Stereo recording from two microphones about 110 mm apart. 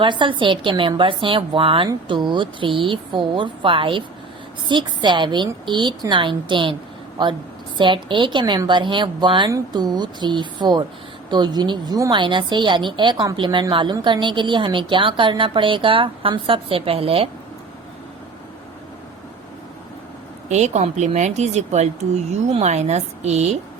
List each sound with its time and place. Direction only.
0.0 s a woman's voice: 45° right (ahead or behind)
7.8 s a woman's voice: 45° right (ahead or behind)
20.5 s a woman's voice: 90° right